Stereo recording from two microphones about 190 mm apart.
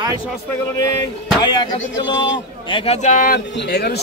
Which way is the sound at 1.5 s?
25° left (ahead or behind).